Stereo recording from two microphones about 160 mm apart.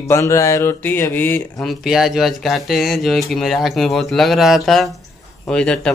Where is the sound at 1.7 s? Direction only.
Centre (ahead or behind).